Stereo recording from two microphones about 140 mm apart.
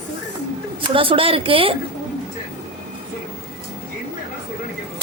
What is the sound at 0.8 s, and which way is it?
Speech, 40° right (ahead or behind).